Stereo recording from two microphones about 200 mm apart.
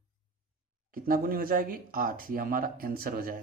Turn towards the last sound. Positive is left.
turn(degrees=-45)  # may be behind; listen again after turning